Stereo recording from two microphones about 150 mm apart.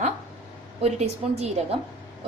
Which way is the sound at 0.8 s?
45° right (ahead or behind).